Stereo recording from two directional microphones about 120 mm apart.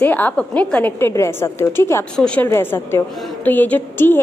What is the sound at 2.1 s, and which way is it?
Speech, 5° left (ahead or behind).